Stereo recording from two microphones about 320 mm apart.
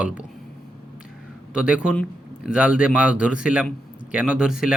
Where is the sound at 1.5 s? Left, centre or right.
Centre.